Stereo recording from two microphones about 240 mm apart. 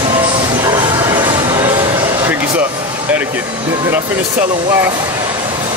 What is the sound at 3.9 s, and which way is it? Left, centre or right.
Speech, centre.